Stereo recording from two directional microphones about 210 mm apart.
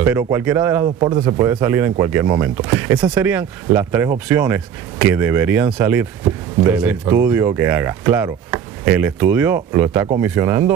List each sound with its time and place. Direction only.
0.0 s speech: 10° right (ahead or behind)